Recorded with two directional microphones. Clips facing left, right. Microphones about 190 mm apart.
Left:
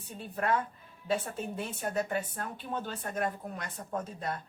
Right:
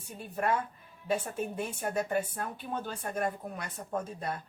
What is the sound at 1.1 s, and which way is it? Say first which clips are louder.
Speech: right 1 dB; 10° right (ahead or behind).